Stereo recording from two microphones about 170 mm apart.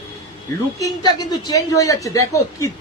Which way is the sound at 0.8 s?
25° left (ahead or behind).